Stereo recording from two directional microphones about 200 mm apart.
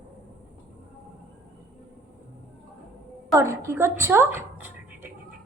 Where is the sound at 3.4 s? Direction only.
15° right (ahead or behind).